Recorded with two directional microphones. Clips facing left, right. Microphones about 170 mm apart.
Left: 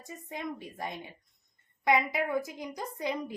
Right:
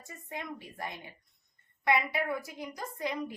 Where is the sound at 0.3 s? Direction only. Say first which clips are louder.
Left 3 dB; 20° left (ahead or behind).